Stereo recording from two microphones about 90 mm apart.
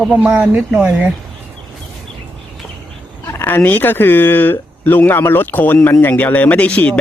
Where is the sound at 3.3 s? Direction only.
20° left (ahead or behind).